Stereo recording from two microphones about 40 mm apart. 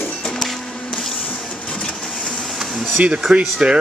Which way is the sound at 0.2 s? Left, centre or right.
Centre.